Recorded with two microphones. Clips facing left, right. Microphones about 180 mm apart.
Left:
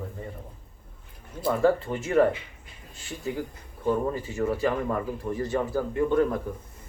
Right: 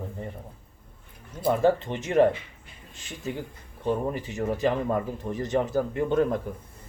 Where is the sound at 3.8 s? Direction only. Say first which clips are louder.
Left 1 dB; 20° right (ahead or behind).